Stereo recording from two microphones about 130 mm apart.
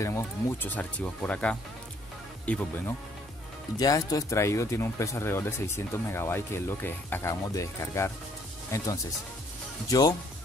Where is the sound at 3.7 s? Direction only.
30° left (ahead or behind).